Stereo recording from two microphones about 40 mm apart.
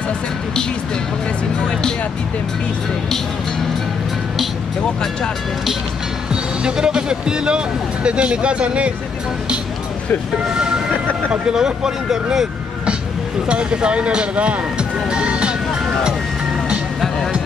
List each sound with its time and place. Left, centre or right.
6.6 s speech: right
10.5 s speech: centre
13.5 s speech: right